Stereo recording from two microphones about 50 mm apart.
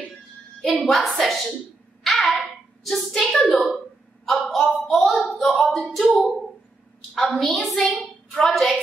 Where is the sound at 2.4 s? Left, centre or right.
Centre.